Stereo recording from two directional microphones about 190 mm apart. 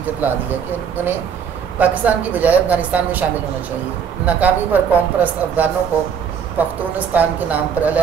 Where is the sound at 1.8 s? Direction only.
10° right (ahead or behind).